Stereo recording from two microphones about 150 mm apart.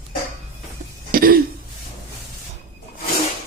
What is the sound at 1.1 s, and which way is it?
Throat clearing, 75° right (ahead or behind).